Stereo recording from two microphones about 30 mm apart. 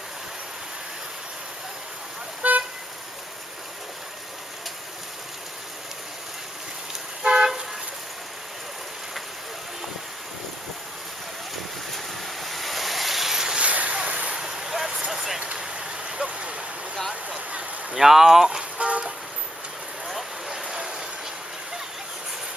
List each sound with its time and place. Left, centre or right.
2.4 s vehicle: right
7.2 s toot: right
12.4 s vehicle: centre
13.6 s vehicle: right
14.3 s vehicle: centre
15.4 s vehicle: right
16.0 s vehicle: right
17.1 s a sound: right
17.9 s a sound: centre
18.8 s vehicle: right
20.7 s a sound: right